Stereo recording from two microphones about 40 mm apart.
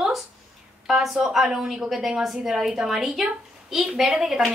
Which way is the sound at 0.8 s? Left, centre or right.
Centre.